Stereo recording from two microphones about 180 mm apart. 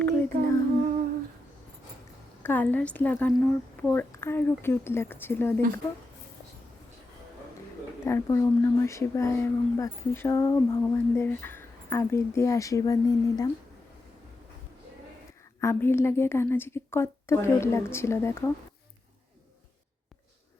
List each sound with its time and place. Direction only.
0.0 s female singing: 15° left (ahead or behind)
2.4 s speech: 10° left (ahead or behind)
8.0 s speech: 15° left (ahead or behind)
15.6 s speech: 15° left (ahead or behind)